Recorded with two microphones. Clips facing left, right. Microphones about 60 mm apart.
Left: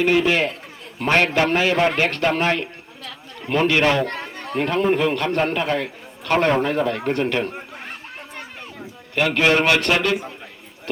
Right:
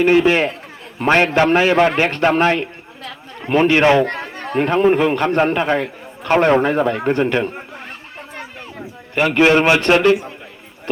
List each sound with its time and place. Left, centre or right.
0.0 s a man's voice: right
9.1 s a man's voice: right